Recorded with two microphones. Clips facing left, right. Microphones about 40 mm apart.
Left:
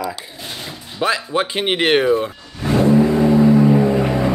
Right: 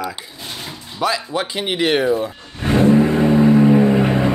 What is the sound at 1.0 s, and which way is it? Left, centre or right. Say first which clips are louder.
Speech: left 1 dB; left.